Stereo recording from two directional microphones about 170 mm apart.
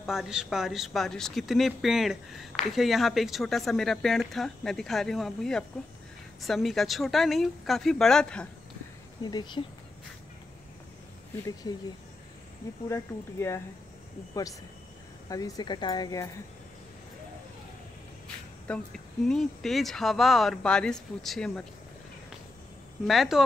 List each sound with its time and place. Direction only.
0.0 s speech: centre (ahead or behind)
9.2 s speech: 25° left (ahead or behind)
12.8 s speech: 15° left (ahead or behind)
15.2 s speech: 20° left (ahead or behind)
18.7 s speech: 5° left (ahead or behind)
23.0 s speech: centre (ahead or behind)